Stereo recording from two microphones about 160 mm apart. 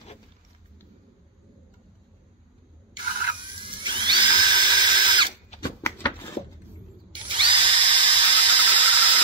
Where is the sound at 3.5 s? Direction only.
30° right (ahead or behind).